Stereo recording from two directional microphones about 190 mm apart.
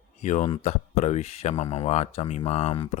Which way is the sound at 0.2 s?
40° left (ahead or behind).